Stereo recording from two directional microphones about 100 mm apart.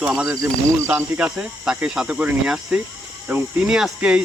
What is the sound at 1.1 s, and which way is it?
Speech, 10° right (ahead or behind).